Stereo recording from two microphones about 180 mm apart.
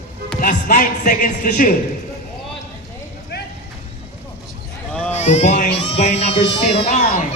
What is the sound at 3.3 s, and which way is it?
Vehicle, 65° left (ahead or behind).